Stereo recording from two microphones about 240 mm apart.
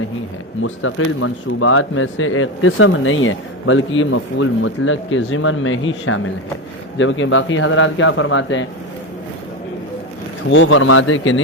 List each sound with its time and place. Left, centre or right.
0.6 s a man's voice: left
10.5 s speech: left